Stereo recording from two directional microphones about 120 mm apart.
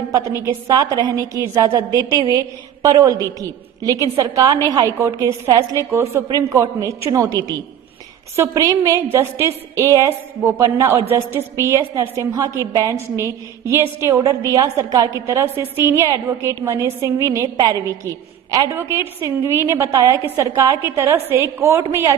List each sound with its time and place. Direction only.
0.1 s a woman's voice: 25° right (ahead or behind)